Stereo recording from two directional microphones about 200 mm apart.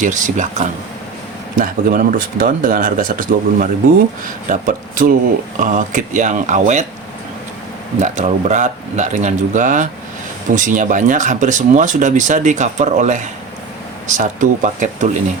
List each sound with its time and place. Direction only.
0.0 s speech: 40° right (ahead or behind)
7.9 s speech: 35° right (ahead or behind)